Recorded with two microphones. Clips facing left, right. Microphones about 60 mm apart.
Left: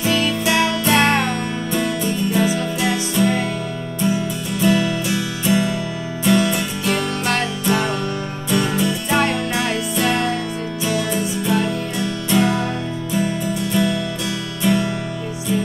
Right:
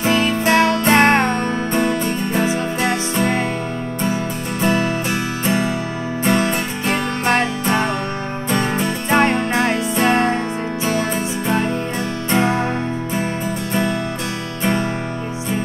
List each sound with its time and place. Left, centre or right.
0.0 s music: right
14.6 s music: right